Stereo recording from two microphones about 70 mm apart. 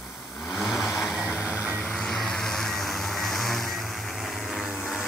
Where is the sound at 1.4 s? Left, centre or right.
Centre.